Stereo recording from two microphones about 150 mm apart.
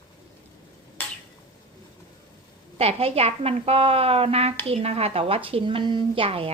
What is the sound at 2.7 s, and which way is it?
Speech, 40° right (ahead or behind).